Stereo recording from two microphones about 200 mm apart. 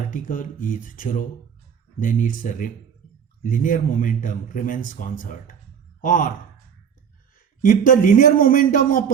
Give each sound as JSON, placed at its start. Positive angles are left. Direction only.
{"t": 0.1, "sound": "speech", "side_deg": 45}
{"t": 7.3, "sound": "speech", "side_deg": 45}